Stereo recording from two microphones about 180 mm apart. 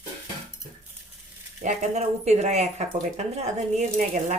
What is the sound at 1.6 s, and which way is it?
Speech, 40° right (ahead or behind).